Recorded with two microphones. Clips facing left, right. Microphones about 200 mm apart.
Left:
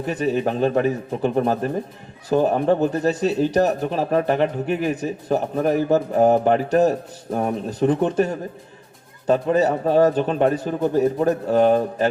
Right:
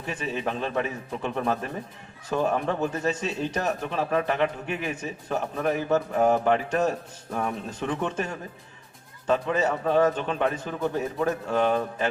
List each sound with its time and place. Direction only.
0.0 s a man's voice: 40° left (ahead or behind)